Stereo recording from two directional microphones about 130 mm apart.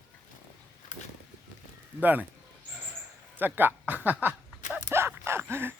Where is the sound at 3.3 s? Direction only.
15° right (ahead or behind).